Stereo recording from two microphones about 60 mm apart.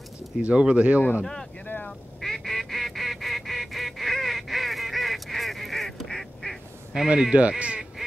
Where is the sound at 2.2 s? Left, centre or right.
Centre.